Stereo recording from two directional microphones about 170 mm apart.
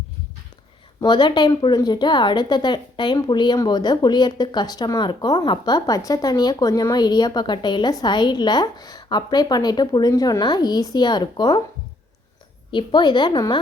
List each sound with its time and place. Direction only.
1.0 s a woman's voice: 25° left (ahead or behind)
12.7 s a woman's voice: 25° left (ahead or behind)